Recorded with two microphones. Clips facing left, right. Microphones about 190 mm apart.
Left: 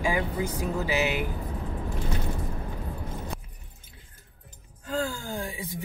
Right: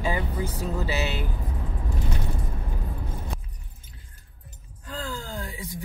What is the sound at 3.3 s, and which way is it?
Keys jangling, centre (ahead or behind).